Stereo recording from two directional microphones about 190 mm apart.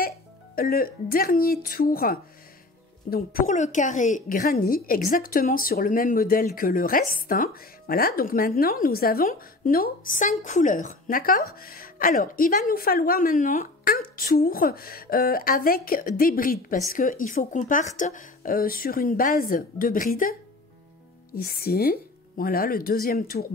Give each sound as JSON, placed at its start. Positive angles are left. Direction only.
{"t": 0.6, "sound": "a woman's voice", "side_deg": 50}